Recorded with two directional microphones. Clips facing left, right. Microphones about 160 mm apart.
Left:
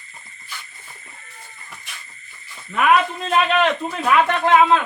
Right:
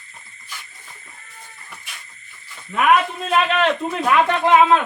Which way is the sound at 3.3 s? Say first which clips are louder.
Even; centre (ahead or behind).